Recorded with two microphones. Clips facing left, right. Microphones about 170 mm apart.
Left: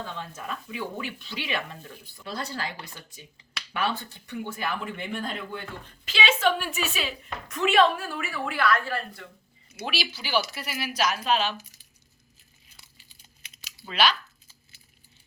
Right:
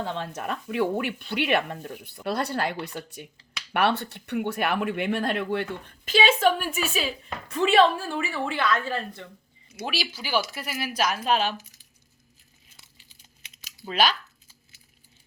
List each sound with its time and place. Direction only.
0.0 s speech: 70° right (ahead or behind)
6.1 s a woman's voice: 50° right (ahead or behind); by 9.2 s 20° right (ahead or behind)
9.8 s speech: 45° right (ahead or behind)
12.7 s crumpling: 20° right (ahead or behind)
13.8 s speech: 45° right (ahead or behind)